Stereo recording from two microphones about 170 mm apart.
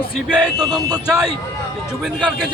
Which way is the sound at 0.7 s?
20° right (ahead or behind).